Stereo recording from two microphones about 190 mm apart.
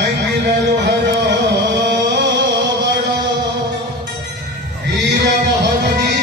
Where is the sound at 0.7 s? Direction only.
65° right (ahead or behind).